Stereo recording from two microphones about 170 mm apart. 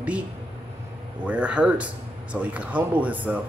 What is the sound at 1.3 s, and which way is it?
A man's voice, 5° right (ahead or behind).